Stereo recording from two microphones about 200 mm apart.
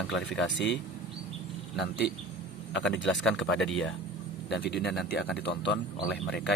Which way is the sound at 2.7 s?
65° left (ahead or behind).